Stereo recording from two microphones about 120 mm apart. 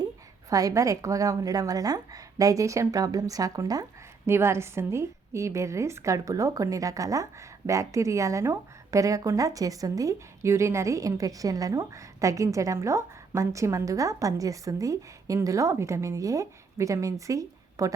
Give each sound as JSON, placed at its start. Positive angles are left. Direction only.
{"t": 0.5, "sound": "speech", "side_deg": -30}